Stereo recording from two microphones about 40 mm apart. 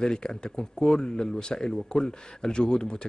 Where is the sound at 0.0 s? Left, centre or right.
Centre.